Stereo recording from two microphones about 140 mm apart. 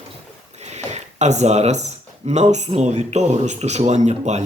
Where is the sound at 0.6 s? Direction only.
55° right (ahead or behind).